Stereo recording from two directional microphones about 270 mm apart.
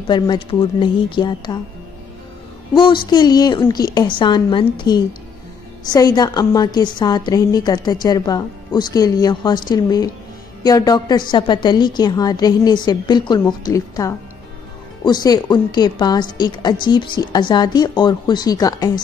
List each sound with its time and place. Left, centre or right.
0.0 s a woman's voice: centre
2.7 s a woman's voice: centre